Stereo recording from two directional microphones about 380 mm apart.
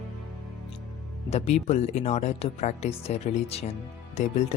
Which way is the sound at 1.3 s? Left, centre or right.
Centre.